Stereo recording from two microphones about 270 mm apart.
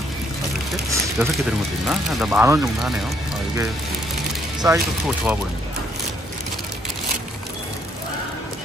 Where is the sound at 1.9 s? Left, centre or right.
Centre.